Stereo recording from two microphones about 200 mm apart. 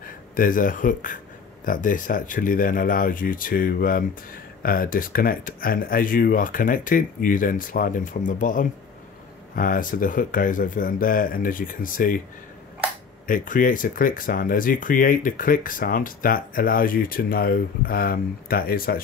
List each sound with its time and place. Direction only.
0.0 s speech: 45° left (ahead or behind)
13.3 s speech: 40° left (ahead or behind)